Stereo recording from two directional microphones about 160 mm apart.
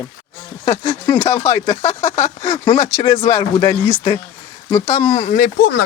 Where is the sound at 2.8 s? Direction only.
20° left (ahead or behind).